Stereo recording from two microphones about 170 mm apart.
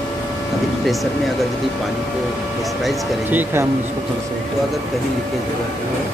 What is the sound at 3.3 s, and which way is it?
Speech, 10° right (ahead or behind).